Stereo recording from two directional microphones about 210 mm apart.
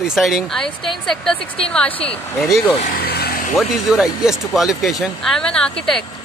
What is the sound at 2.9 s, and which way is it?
Vehicle, 45° left (ahead or behind).